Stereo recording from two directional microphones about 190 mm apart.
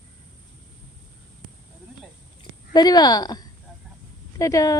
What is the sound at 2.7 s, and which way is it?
Speech, 20° left (ahead or behind).